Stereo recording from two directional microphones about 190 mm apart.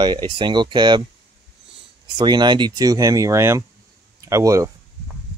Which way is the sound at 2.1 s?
25° right (ahead or behind).